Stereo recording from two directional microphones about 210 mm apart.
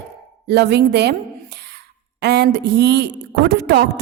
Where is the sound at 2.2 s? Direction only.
50° right (ahead or behind).